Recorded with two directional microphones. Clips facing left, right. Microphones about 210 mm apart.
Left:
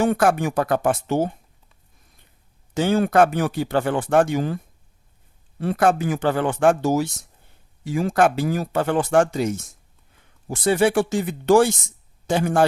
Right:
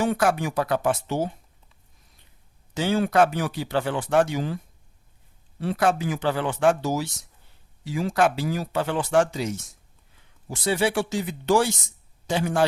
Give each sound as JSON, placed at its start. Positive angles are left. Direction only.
{"t": 0.0, "sound": "speech", "side_deg": 50}
{"t": 2.7, "sound": "speech", "side_deg": 50}